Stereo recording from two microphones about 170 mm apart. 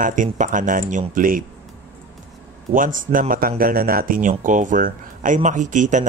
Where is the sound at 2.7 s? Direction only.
55° right (ahead or behind).